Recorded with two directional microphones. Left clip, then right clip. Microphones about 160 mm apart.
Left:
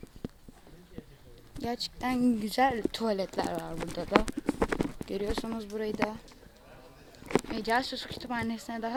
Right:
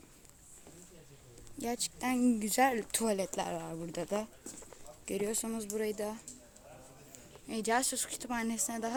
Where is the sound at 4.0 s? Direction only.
15° right (ahead or behind).